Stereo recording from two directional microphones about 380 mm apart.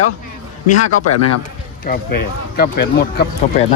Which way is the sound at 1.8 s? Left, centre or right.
Left.